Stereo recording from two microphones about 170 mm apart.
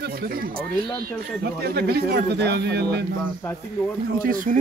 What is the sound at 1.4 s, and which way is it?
Speech, 70° right (ahead or behind).